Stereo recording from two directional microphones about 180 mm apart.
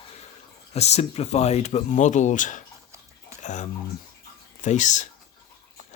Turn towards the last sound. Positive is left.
turn(degrees=40)  # may be behind; listen again after turning